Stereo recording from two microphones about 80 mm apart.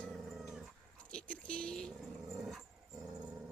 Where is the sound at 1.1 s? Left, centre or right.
Centre.